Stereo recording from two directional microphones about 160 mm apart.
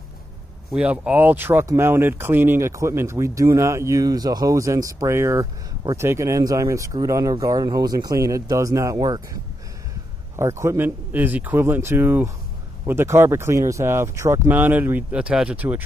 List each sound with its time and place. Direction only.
0.7 s speech: 10° right (ahead or behind)